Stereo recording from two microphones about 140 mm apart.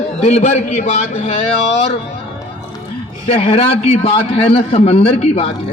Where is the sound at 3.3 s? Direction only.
45° left (ahead or behind).